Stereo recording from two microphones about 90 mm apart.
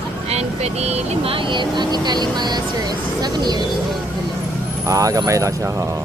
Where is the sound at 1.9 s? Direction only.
50° right (ahead or behind).